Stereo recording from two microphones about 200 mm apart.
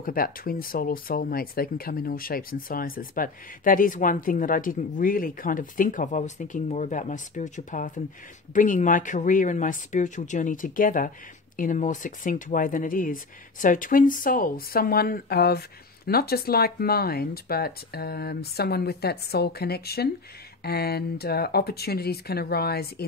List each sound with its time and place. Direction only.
0.0 s speech: 45° left (ahead or behind)